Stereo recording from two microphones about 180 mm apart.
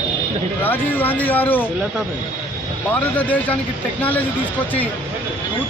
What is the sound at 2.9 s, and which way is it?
Speech, 10° left (ahead or behind).